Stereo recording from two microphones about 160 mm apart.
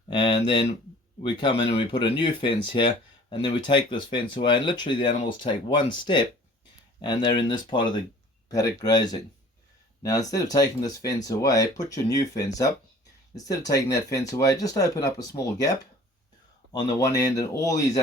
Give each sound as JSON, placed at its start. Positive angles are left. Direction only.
{"t": 0.1, "sound": "speech", "side_deg": 35}
{"t": 16.7, "sound": "speech", "side_deg": 20}